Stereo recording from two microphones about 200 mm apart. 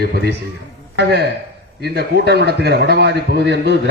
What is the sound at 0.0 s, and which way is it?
A man's voice, 55° right (ahead or behind).